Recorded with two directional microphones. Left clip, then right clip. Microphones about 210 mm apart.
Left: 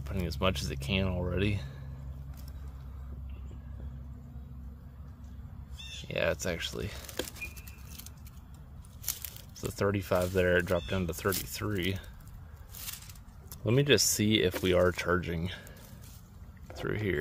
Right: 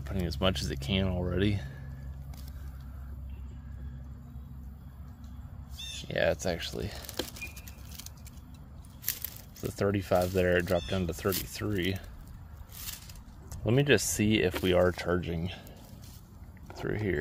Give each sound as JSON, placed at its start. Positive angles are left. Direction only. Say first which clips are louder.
{"t": 0.0, "sound": "speech", "louder": "right 1 dB", "side_deg": -5}
{"t": 5.8, "sound": "a sound", "louder": "right 4 dB", "side_deg": -60}
{"t": 6.0, "sound": "speech", "louder": "right 2 dB", "side_deg": -5}
{"t": 9.6, "sound": "speech", "louder": "right 1 dB", "side_deg": 0}
{"t": 13.5, "sound": "speech", "louder": "even", "side_deg": 5}
{"t": 16.6, "sound": "speech", "louder": "even", "side_deg": 10}